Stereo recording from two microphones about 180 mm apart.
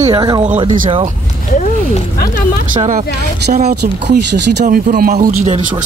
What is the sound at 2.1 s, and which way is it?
Speech, 55° left (ahead or behind).